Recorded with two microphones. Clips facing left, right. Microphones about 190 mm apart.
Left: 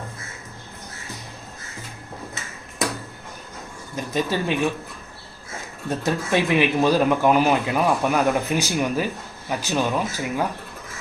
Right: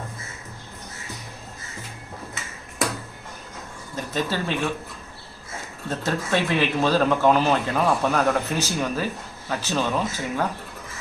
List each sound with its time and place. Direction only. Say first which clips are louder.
3.9 s speech: left 2 dB; 15° left (ahead or behind)
5.9 s speech: left 2 dB; 15° left (ahead or behind)